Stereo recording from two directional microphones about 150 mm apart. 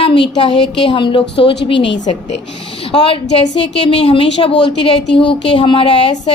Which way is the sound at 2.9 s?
35° left (ahead or behind).